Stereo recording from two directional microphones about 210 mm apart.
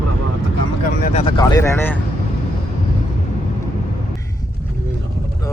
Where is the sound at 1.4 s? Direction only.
15° left (ahead or behind).